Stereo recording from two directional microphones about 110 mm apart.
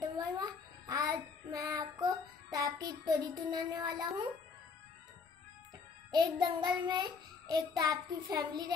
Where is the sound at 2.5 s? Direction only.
35° right (ahead or behind).